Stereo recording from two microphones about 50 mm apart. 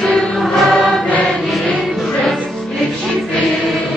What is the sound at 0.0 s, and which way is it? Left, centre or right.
Music, centre.